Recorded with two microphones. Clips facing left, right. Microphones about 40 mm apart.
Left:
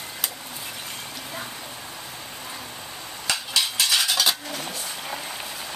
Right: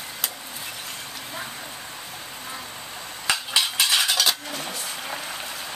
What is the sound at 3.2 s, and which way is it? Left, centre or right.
Cutlery, centre.